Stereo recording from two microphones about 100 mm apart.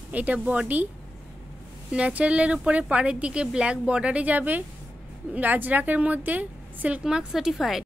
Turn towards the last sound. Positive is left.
turn(degrees=-5)  # may be behind; listen again after turning